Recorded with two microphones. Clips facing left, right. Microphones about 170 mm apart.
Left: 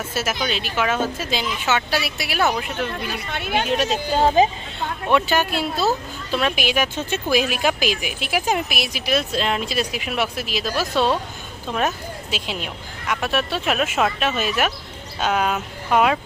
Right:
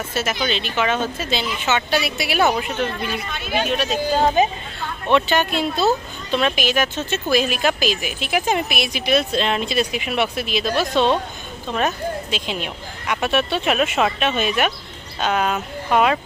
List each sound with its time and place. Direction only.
0.1 s speech: 5° left (ahead or behind)
3.1 s a woman's voice: 65° left (ahead or behind)
4.4 s speech: 30° left (ahead or behind)
5.0 s speech: 5° left (ahead or behind)